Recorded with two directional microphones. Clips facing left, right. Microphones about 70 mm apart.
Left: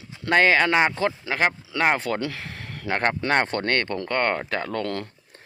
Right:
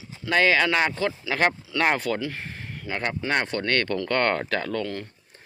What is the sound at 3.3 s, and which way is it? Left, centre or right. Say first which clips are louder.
Speech: even; left.